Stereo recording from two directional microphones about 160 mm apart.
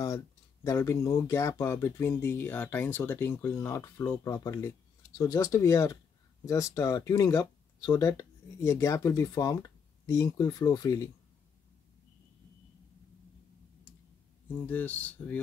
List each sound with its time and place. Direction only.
0.7 s speech: 20° left (ahead or behind)
14.7 s speech: 10° left (ahead or behind)